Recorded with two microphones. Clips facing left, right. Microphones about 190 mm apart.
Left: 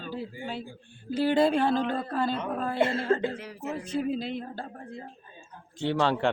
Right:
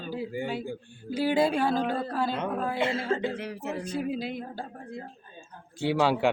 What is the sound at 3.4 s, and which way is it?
Speech, 65° right (ahead or behind).